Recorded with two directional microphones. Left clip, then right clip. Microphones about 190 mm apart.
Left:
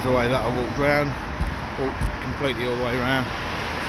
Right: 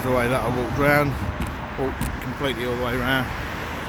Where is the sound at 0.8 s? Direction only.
20° right (ahead or behind).